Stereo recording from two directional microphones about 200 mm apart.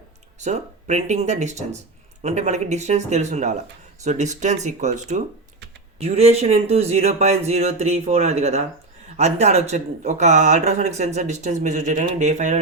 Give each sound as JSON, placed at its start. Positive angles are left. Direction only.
{"t": 0.3, "sound": "speech", "side_deg": -35}